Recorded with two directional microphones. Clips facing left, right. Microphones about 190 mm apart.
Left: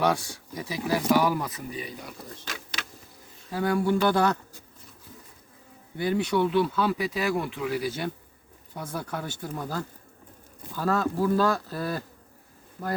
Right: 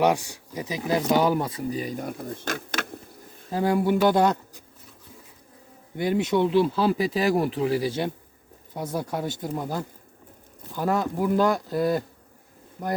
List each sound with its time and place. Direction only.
0.0 s speech: 15° right (ahead or behind)
1.8 s speech: 45° right (ahead or behind)
3.5 s speech: 20° right (ahead or behind)
6.0 s speech: 20° right (ahead or behind)